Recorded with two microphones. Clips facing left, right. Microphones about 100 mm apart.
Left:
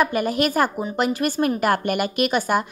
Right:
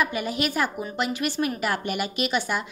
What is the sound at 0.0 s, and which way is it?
A woman's voice, 50° left (ahead or behind).